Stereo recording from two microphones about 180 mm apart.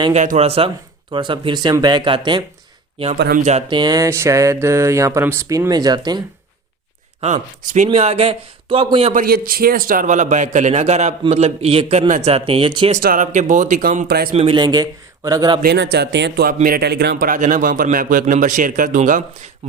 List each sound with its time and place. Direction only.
0.0 s speech: 40° right (ahead or behind)
3.2 s speech: 55° right (ahead or behind)
3.7 s a sound: 25° right (ahead or behind)
7.2 s a man's voice: 40° right (ahead or behind)
9.1 s a man's voice: 55° right (ahead or behind); by 13.0 s 30° right (ahead or behind)
13.0 s a man's voice: 50° right (ahead or behind)
14.1 s speech: 60° right (ahead or behind)
14.3 s speech: 30° right (ahead or behind)
15.6 s a man's voice: 70° right (ahead or behind); by 19.2 s 45° right (ahead or behind)